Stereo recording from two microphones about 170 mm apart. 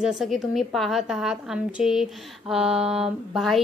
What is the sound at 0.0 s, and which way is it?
A woman's voice, centre (ahead or behind).